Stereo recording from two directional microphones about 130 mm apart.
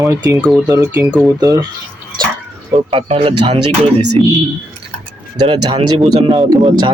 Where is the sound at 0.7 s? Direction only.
20° right (ahead or behind).